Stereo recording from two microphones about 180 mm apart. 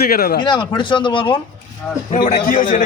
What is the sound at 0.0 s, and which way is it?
Speech, 55° left (ahead or behind).